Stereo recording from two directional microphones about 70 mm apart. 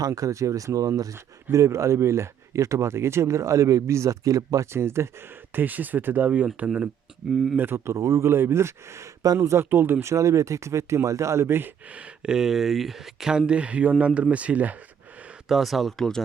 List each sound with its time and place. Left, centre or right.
0.1 s speech: right
1.5 s speech: right
4.6 s speech: right
5.5 s speech: right
7.9 s speech: right
8.3 s speech: right
9.6 s speech: right
12.2 s speech: centre
15.4 s speech: centre